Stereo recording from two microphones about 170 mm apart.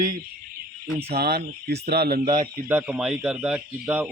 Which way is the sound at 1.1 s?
70° right (ahead or behind).